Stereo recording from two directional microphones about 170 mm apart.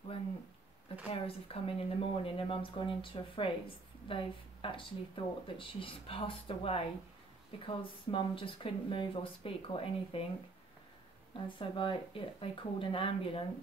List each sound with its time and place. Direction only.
1.1 s speech: 35° left (ahead or behind)
11.4 s speech: 30° left (ahead or behind)